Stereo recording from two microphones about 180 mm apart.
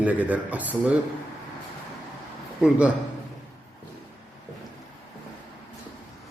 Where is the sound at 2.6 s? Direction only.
5° right (ahead or behind).